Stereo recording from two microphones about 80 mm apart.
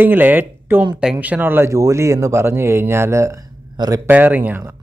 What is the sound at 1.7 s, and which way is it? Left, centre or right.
Speech, right.